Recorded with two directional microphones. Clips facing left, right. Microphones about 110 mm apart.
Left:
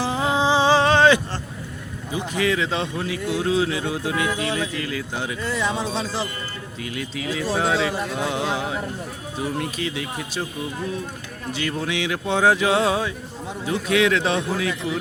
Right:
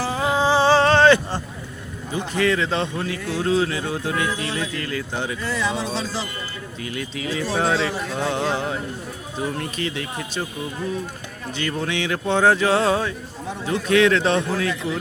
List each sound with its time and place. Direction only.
0.0 s a sound: 20° left (ahead or behind)
2.1 s speech: 10° left (ahead or behind)
5.4 s speech: 20° left (ahead or behind)
6.8 s speech: centre (ahead or behind)
11.5 s speech: 5° left (ahead or behind)